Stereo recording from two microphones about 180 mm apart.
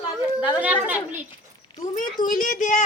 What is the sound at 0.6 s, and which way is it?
Speech, 10° right (ahead or behind).